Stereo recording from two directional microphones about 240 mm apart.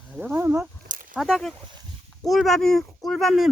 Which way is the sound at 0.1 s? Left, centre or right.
Centre.